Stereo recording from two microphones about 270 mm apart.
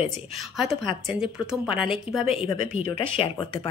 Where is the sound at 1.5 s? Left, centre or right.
Centre.